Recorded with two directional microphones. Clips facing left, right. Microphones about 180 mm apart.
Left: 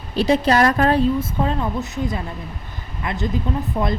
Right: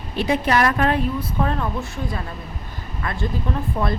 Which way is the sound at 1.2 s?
20° left (ahead or behind).